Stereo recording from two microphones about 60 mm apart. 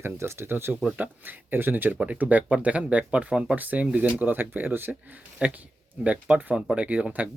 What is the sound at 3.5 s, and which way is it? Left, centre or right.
Speech, right.